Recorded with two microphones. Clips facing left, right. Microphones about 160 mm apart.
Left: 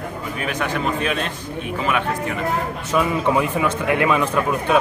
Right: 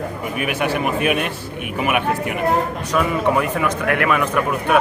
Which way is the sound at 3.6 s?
20° left (ahead or behind).